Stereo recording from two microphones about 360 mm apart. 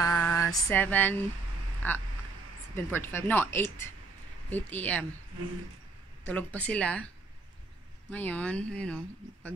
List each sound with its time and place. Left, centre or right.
0.0 s a sound: centre
1.8 s speech: centre
6.2 s speech: centre
8.1 s speech: centre